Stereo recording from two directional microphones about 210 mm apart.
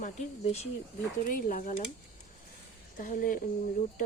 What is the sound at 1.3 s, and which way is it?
Speech, 40° left (ahead or behind).